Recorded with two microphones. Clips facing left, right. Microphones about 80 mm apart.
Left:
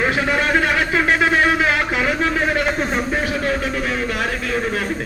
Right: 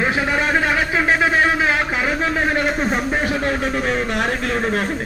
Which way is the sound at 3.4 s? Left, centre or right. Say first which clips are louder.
Right 1 dB; right.